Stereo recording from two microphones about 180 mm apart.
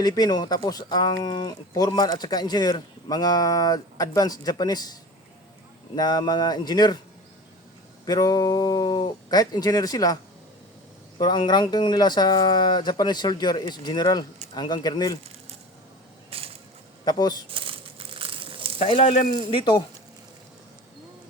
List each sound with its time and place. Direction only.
0.0 s speech: 20° left (ahead or behind)
6.0 s speech: 20° left (ahead or behind)
8.0 s speech: 20° left (ahead or behind)
11.2 s speech: 25° left (ahead or behind)
16.3 s crushing: 30° right (ahead or behind)
17.1 s speech: 25° left (ahead or behind)
17.5 s crumpling: 30° right (ahead or behind)
18.8 s speech: 35° left (ahead or behind)